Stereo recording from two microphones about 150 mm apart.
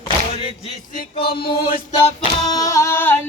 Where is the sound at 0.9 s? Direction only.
90° left.